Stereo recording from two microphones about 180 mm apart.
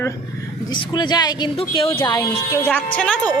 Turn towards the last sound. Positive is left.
turn(degrees=5)  # may be behind; listen again after turning